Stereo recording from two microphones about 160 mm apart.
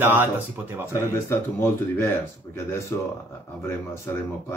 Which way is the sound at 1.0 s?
15° left (ahead or behind).